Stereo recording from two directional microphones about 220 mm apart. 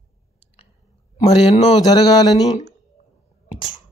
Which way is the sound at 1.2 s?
25° left (ahead or behind).